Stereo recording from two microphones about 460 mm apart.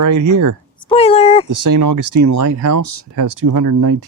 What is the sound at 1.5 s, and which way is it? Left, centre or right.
Speech, right.